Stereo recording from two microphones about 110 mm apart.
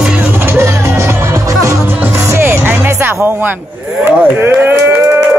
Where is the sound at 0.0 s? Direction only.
10° right (ahead or behind).